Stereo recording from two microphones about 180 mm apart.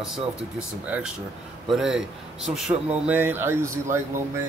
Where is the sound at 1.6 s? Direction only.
Centre (ahead or behind).